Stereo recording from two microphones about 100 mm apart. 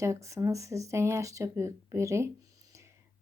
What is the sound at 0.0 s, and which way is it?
Speech, 30° right (ahead or behind).